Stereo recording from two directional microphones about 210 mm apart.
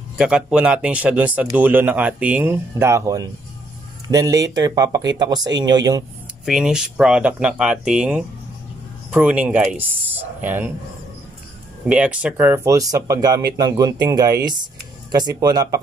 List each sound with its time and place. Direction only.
0.2 s speech: 5° right (ahead or behind)
6.4 s speech: 5° right (ahead or behind)
11.8 s speech: 5° right (ahead or behind)